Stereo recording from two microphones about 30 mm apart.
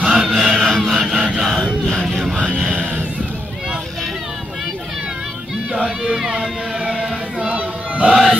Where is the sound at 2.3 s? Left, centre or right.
Right.